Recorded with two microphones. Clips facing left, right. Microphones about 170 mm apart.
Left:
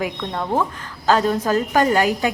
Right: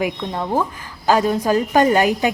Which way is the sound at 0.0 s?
10° right (ahead or behind).